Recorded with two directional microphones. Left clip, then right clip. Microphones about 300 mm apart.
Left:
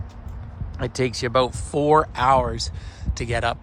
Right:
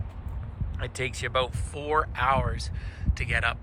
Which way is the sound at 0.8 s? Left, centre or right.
Centre.